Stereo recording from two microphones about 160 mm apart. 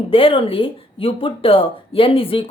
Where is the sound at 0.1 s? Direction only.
35° left (ahead or behind).